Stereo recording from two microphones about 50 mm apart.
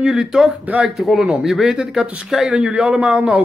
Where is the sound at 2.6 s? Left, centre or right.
Centre.